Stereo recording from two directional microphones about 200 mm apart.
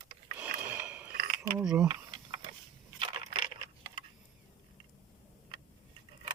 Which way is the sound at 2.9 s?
25° right (ahead or behind).